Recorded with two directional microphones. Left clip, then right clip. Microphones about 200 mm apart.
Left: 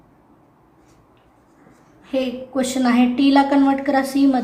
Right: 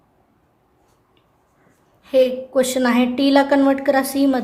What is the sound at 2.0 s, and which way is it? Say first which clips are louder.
A woman's voice: right 7 dB; 50° right (ahead or behind).